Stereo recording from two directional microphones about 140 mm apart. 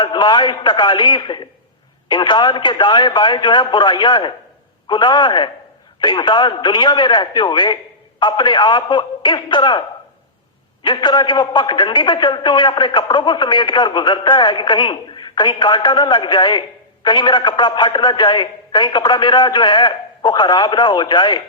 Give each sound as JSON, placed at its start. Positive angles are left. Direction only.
{"t": 0.0, "sound": "a man's voice", "side_deg": 35}
{"t": 10.8, "sound": "a man's voice", "side_deg": 35}